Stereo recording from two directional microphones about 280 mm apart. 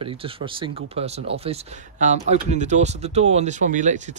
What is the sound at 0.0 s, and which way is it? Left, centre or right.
Speech, centre.